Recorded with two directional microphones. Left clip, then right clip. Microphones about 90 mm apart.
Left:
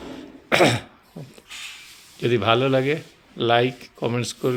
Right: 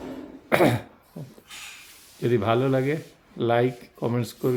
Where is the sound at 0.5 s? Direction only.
25° right (ahead or behind).